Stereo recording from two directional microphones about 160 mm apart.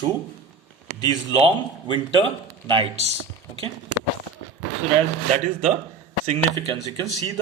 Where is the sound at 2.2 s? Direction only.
30° right (ahead or behind).